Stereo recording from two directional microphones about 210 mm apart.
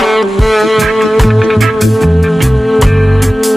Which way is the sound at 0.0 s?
Centre (ahead or behind).